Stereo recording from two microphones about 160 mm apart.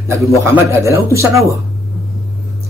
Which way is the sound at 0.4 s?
20° right (ahead or behind).